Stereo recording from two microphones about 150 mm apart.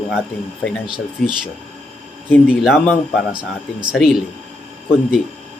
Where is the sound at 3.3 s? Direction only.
30° right (ahead or behind).